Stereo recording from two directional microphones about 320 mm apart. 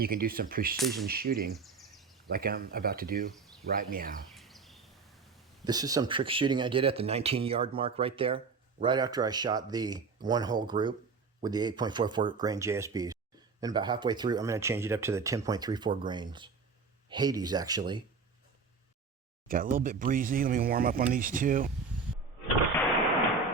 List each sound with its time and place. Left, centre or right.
0.0 s speech: right
1.5 s a sound: centre
2.3 s speech: right
4.3 s a sound: centre
5.6 s speech: centre
19.5 s speech: right